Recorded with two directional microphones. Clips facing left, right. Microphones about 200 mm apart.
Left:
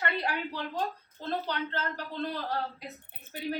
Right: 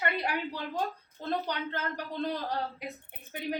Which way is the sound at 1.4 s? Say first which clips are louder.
Left 1 dB; 15° right (ahead or behind).